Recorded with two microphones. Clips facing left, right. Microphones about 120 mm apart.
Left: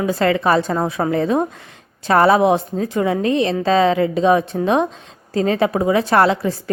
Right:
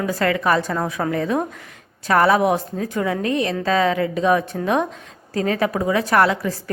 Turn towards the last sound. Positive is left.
turn(degrees=25)  # may be behind; listen again after turning